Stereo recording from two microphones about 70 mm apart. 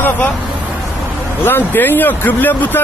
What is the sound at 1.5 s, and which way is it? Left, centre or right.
Speech, left.